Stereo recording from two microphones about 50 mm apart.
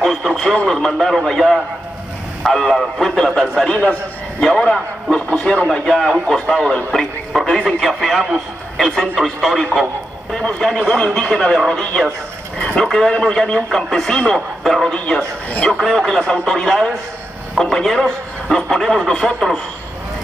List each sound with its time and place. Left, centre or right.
0.0 s radio: centre
0.7 s a man's voice: centre
5.3 s speech: centre
5.7 s a man's voice: centre
7.8 s a man's voice: centre
11.1 s a man's voice: centre
11.5 s a man's voice: centre
15.5 s speech: left
15.8 s a man's voice: centre